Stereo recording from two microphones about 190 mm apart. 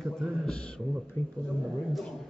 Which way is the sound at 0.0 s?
Centre (ahead or behind).